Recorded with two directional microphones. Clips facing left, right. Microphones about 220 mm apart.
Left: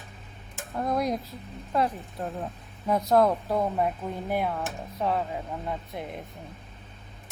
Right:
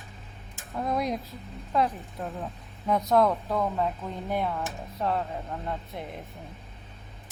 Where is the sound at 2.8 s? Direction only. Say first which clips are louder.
Left 1 dB; centre (ahead or behind).